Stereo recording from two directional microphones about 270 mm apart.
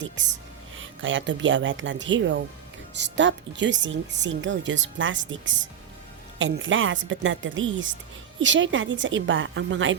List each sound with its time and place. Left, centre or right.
0.8 s a woman's voice: right
6.4 s a woman's voice: right